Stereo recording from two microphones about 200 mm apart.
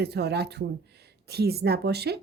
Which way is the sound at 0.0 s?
55° right (ahead or behind).